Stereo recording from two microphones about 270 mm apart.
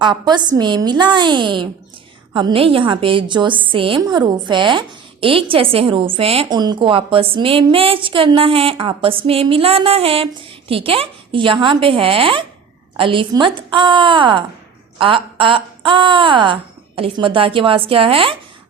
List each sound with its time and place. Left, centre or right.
0.0 s a woman's voice: centre